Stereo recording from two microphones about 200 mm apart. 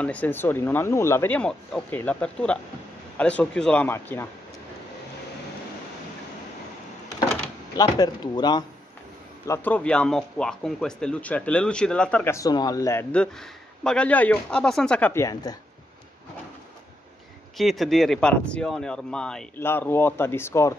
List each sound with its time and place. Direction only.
0.0 s speech: 5° left (ahead or behind)
7.7 s speech: 20° left (ahead or behind)
9.5 s speech: 5° left (ahead or behind)
17.6 s speech: centre (ahead or behind)